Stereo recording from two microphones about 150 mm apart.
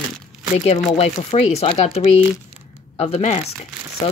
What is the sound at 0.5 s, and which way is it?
Speech, 45° left (ahead or behind).